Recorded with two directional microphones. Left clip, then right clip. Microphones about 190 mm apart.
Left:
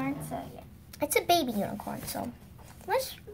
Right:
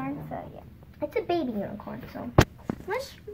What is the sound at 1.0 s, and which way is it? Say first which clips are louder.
A woman's voice: left 2 dB; 50° left (ahead or behind).